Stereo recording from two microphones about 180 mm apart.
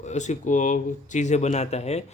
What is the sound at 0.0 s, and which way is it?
Speech, 40° left (ahead or behind).